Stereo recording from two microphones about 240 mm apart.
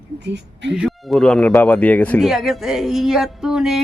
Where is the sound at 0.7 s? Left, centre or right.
Centre.